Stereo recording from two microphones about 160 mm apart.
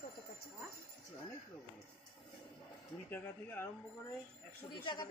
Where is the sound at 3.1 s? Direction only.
10° left (ahead or behind).